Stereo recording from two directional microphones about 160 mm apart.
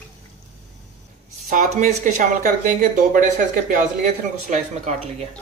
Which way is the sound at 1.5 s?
50° right (ahead or behind).